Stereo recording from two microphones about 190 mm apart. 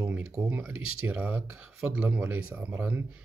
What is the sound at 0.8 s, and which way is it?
Speech, 90° right.